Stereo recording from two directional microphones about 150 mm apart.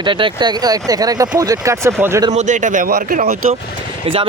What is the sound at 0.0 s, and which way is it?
Speech, 35° right (ahead or behind).